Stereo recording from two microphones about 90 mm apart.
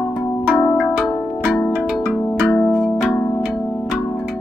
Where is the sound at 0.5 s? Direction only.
15° left (ahead or behind).